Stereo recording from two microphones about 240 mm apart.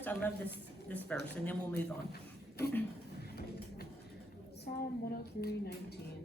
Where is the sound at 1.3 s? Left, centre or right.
Centre.